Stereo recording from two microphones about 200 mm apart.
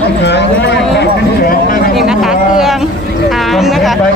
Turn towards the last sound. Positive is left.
turn(degrees=0)  # may be behind; listen again after turning